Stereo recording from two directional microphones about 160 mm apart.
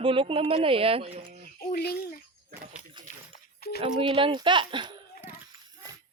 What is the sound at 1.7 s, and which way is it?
Speech, 80° left.